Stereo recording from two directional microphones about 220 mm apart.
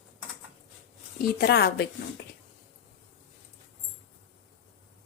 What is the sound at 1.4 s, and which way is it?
Speech, 50° left (ahead or behind).